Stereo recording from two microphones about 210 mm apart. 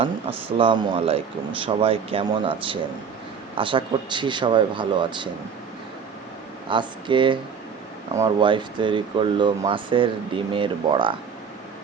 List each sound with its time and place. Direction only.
0.0 s speech: 25° right (ahead or behind)
6.7 s speech: 25° right (ahead or behind)